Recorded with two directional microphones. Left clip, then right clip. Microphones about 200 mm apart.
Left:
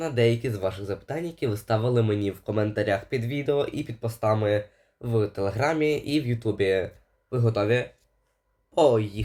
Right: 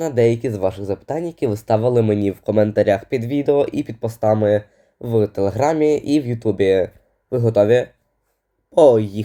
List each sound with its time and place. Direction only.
0.0 s speech: 20° right (ahead or behind)
8.7 s speech: 30° right (ahead or behind)